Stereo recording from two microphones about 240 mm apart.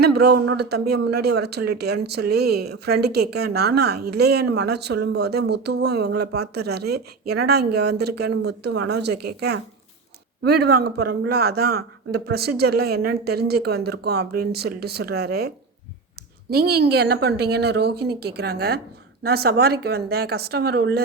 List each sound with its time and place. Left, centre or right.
0.0 s a woman's voice: right